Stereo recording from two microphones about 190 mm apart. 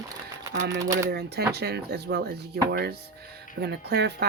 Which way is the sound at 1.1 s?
60° right (ahead or behind).